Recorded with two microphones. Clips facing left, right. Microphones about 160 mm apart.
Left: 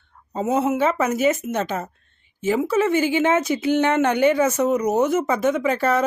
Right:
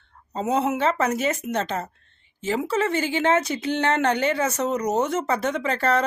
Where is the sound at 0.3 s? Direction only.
5° left (ahead or behind).